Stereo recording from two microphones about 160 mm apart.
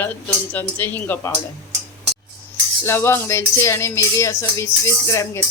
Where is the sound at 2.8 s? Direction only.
15° left (ahead or behind).